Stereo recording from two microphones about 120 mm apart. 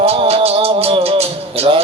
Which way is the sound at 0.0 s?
55° right (ahead or behind).